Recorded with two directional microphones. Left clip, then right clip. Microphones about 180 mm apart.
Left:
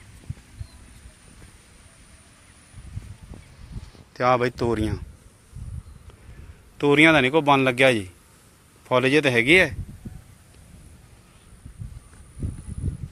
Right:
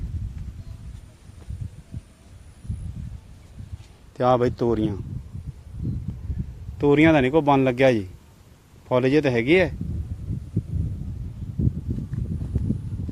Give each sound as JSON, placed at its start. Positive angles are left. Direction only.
{"t": 4.1, "sound": "a man's voice", "side_deg": -35}
{"t": 6.7, "sound": "a man's voice", "side_deg": -15}